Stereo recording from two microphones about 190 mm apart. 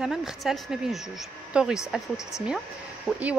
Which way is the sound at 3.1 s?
5° right (ahead or behind).